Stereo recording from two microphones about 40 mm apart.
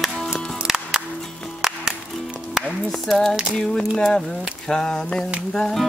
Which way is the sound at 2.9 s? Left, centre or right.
Centre.